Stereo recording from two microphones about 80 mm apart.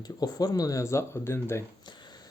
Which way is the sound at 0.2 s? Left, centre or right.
Left.